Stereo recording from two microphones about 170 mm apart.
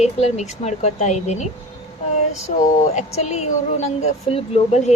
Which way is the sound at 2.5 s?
40° left (ahead or behind).